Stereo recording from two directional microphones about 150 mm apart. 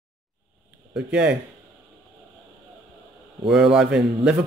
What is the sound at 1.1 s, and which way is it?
Speech, 10° right (ahead or behind).